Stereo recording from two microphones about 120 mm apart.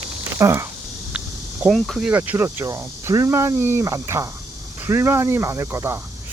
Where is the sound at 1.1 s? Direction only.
10° right (ahead or behind).